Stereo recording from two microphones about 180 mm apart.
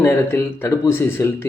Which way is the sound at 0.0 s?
15° left (ahead or behind).